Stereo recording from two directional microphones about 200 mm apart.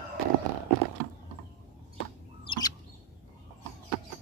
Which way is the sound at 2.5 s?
20° left (ahead or behind).